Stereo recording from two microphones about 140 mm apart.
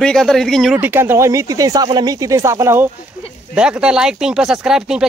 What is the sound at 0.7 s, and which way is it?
Speech, 15° right (ahead or behind).